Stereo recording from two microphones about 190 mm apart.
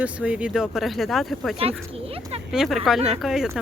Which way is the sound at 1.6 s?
30° right (ahead or behind).